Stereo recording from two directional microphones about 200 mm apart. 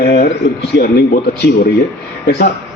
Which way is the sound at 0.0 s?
55° left (ahead or behind).